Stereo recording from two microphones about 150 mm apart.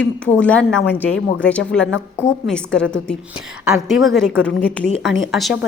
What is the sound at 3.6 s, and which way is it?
A woman's voice, centre (ahead or behind).